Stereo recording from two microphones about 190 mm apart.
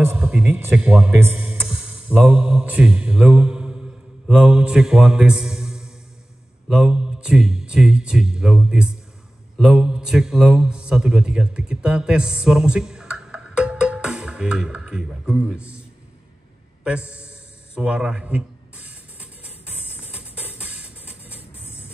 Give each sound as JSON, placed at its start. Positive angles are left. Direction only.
{"t": 0.0, "sound": "a man's voice", "side_deg": -10}
{"t": 16.8, "sound": "a man's voice", "side_deg": -5}
{"t": 17.7, "sound": "music", "side_deg": -5}
{"t": 21.4, "sound": "music", "side_deg": 30}